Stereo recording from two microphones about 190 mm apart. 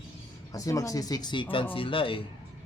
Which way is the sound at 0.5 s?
15° left (ahead or behind).